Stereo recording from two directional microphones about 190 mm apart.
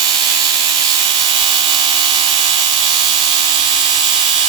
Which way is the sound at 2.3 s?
35° right (ahead or behind).